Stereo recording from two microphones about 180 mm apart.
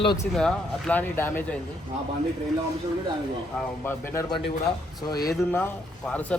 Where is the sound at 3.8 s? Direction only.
15° left (ahead or behind).